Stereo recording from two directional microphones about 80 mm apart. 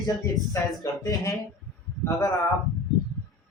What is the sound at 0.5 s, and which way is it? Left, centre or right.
Speech, left.